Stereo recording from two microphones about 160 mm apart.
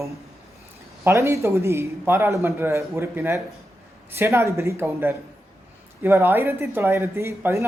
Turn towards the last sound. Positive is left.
turn(degrees=-15)  # may be behind; listen again after turning